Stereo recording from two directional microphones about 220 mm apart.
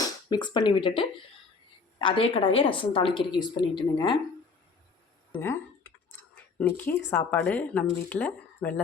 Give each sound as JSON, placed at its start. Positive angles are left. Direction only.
{"t": 0.0, "sound": "a woman's voice", "side_deg": 20}
{"t": 5.4, "sound": "speech", "side_deg": 10}
{"t": 6.3, "sound": "a sound", "side_deg": 10}
{"t": 7.1, "sound": "a woman's voice", "side_deg": 10}